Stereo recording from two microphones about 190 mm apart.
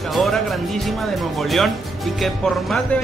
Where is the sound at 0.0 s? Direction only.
Centre (ahead or behind).